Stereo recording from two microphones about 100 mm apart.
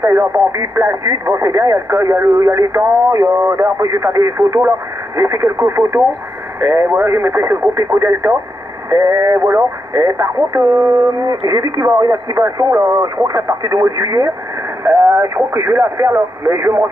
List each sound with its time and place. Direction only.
0.0 s speech: 25° right (ahead or behind)